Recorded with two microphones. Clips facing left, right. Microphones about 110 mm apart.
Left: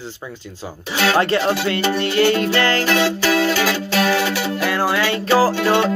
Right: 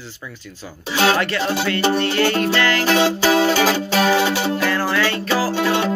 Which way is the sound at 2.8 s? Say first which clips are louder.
Right 1 dB; 25° right (ahead or behind).